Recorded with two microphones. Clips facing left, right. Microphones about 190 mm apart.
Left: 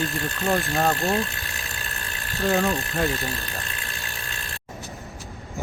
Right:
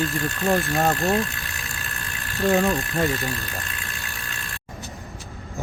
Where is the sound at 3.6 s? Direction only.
35° left (ahead or behind).